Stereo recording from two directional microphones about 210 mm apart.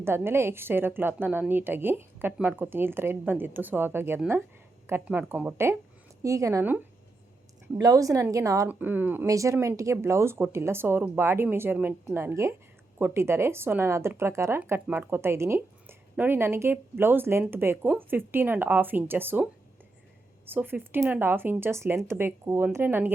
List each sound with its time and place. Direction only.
0.0 s speech: 10° right (ahead or behind)
20.5 s speech: 10° right (ahead or behind)